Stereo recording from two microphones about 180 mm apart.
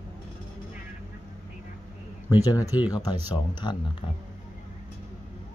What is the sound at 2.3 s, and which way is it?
Speech, 20° left (ahead or behind).